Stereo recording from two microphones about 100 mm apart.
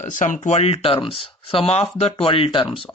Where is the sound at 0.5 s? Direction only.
85° left.